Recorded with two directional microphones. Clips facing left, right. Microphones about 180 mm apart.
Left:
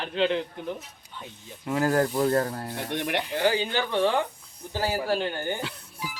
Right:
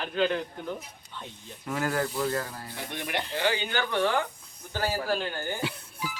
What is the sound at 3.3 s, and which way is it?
Speech, 35° left (ahead or behind).